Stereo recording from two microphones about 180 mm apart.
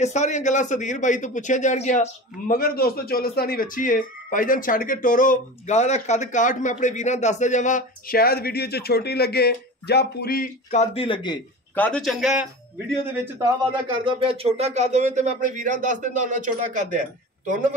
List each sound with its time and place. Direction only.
0.0 s a man's voice: 40° left (ahead or behind)
11.7 s a man's voice: 5° left (ahead or behind)
13.1 s a man's voice: 15° right (ahead or behind)
13.8 s speech: 30° right (ahead or behind); by 16.8 s 45° right (ahead or behind)